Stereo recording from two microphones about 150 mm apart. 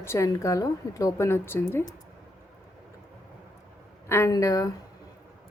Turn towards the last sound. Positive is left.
turn(degrees=20)  # may be behind; listen again after turning